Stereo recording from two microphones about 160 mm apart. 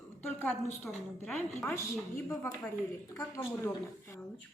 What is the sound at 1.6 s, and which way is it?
A woman's voice, 15° left (ahead or behind).